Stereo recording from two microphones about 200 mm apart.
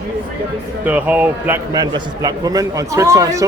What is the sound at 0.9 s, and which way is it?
Speech, 10° right (ahead or behind).